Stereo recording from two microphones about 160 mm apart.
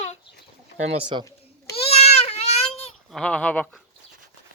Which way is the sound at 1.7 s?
40° left (ahead or behind).